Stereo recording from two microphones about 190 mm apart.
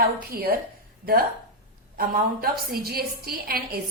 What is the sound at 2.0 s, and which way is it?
A woman's voice, 50° right (ahead or behind).